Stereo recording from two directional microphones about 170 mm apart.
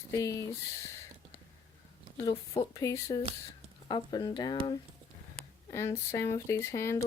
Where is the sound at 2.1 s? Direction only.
25° left (ahead or behind).